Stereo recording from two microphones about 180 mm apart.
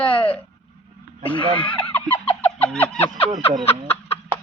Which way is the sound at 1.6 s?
5° left (ahead or behind).